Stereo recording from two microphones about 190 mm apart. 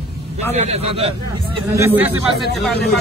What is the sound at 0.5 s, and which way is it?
Speech, 35° right (ahead or behind).